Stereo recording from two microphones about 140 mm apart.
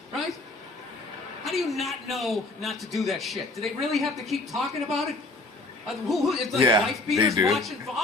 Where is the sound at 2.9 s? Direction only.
Centre (ahead or behind).